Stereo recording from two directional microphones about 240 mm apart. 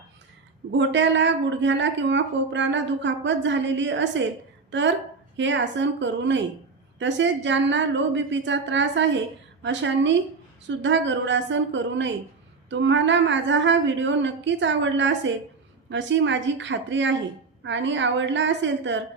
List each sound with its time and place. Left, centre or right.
0.8 s a woman's voice: right
5.4 s a woman's voice: right